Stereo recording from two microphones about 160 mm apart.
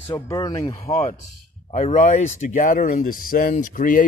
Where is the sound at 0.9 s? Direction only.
40° left (ahead or behind); by 4.0 s 60° left (ahead or behind).